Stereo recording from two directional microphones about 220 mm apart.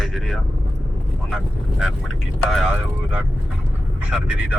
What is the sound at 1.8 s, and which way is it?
Speech, centre (ahead or behind).